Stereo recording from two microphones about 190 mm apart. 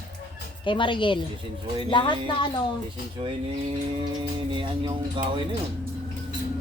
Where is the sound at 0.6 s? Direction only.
25° left (ahead or behind).